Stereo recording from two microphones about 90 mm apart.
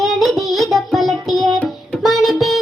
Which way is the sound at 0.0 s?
Centre (ahead or behind).